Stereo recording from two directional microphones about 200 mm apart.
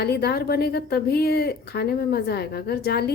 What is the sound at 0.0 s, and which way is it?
A woman's voice, 55° left (ahead or behind).